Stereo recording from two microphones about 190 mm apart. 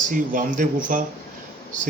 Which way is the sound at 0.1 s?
45° right (ahead or behind).